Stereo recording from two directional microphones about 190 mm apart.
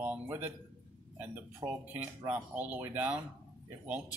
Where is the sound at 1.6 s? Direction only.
15° right (ahead or behind).